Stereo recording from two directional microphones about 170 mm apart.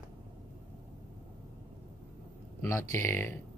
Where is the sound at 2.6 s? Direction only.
15° left (ahead or behind).